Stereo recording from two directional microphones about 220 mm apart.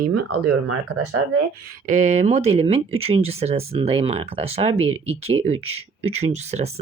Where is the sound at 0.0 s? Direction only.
50° right (ahead or behind).